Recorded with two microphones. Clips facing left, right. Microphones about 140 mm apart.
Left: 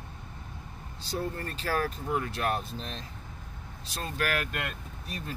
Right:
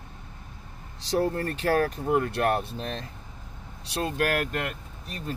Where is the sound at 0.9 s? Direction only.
80° right.